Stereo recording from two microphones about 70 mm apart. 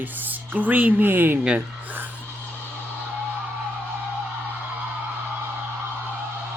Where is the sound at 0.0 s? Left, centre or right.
Right.